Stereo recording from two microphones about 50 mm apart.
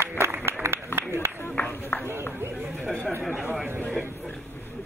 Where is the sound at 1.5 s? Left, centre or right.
Left.